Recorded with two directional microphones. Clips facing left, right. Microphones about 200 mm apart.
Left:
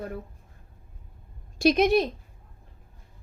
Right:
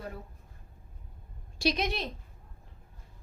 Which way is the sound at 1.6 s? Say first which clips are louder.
Left 10 dB; 50° left (ahead or behind).